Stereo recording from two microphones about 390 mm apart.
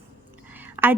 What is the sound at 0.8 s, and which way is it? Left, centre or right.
Speech, centre.